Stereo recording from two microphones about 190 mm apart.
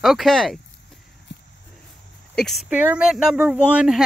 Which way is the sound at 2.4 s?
Centre (ahead or behind).